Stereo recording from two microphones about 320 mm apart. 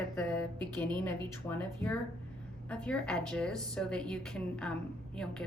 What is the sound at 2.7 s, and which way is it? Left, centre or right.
A woman's voice, centre.